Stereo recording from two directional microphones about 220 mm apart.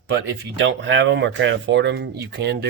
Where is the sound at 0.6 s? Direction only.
55° right (ahead or behind).